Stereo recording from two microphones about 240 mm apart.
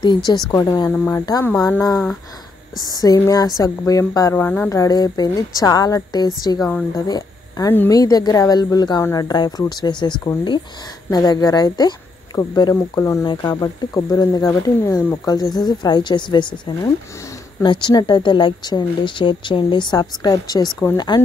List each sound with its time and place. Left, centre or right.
0.0 s speech: centre
17.6 s speech: centre